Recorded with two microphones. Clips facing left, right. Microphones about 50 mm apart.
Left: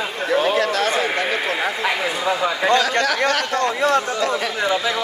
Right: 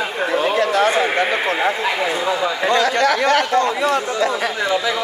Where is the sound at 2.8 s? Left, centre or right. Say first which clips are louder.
Right 3 dB; right.